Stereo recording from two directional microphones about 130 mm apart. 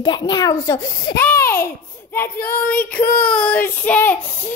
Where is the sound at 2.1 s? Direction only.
15° left (ahead or behind).